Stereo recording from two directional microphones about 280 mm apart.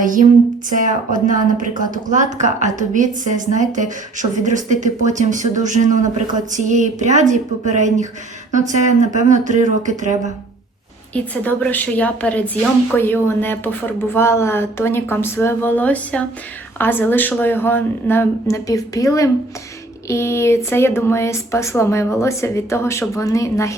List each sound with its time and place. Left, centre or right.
1.1 s speech: right
11.1 s a woman's voice: centre